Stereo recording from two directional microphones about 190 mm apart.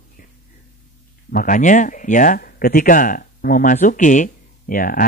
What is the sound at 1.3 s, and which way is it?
A man's voice, 45° left (ahead or behind).